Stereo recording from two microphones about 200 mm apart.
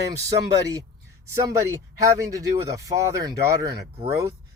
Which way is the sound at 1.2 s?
15° right (ahead or behind).